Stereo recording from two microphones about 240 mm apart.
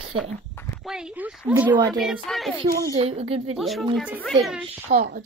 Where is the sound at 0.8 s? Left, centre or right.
Centre.